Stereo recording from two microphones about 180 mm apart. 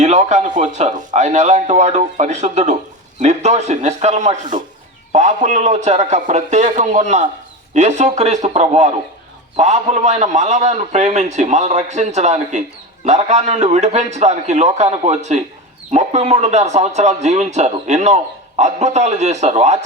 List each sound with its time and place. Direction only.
0.0 s a man's voice: 40° right (ahead or behind)